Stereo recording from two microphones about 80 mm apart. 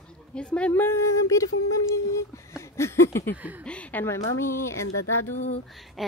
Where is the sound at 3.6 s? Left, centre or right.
Centre.